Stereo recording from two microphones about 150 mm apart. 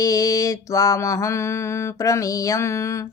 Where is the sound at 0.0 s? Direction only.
25° left (ahead or behind).